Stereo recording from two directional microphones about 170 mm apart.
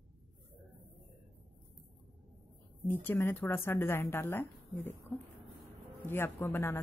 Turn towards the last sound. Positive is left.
turn(degrees=15)  # may be behind; listen again after turning